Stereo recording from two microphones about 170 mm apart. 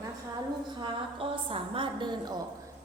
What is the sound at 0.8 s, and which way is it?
A woman's voice, 30° right (ahead or behind).